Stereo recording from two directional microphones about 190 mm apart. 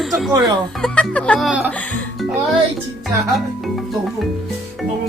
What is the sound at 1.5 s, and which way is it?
Speech, 5° right (ahead or behind).